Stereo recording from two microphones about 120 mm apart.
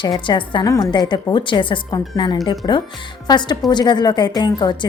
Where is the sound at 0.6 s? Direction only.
30° left (ahead or behind).